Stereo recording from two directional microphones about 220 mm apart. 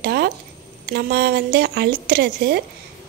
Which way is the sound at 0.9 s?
45° right (ahead or behind).